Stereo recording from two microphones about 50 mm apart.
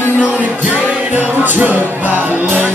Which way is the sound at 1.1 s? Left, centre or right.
Right.